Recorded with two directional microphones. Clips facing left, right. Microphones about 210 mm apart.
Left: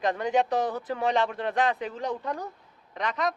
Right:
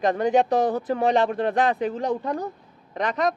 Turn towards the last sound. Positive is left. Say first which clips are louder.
# right 5 dB
turn(degrees=-45)  # may be behind; listen again after turning